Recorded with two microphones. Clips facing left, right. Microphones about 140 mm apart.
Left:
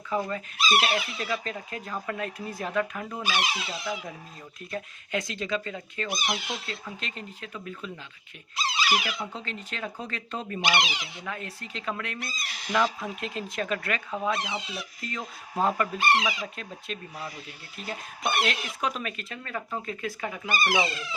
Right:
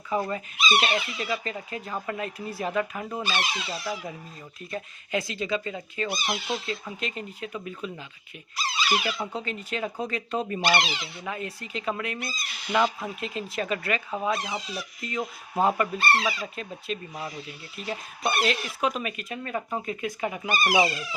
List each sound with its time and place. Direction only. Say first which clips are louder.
0.1 s speech: right 1 dB; 10° right (ahead or behind)
0.6 s speech: even; 5° left (ahead or behind)
3.2 s speech: left 4 dB; 10° left (ahead or behind)
4.7 s speech: right 2 dB; 5° right (ahead or behind)
6.1 s speech: left 1 dB; 15° left (ahead or behind)
6.3 s speech: right 4 dB; 10° right (ahead or behind)
8.9 s speech: right 3 dB; 10° left (ahead or behind)
9.3 s speech: right 5 dB; 10° right (ahead or behind)
10.6 s speech: left 1 dB; 15° left (ahead or behind)
11.2 s speech: right 3 dB; 10° right (ahead or behind)
16.0 s speech: even; 15° left (ahead or behind)
16.6 s speech: right 4 dB; 5° right (ahead or behind)
18.4 s speech: right 3 dB; 5° right (ahead or behind)